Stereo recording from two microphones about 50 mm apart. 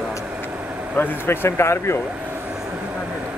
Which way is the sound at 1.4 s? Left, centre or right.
Left.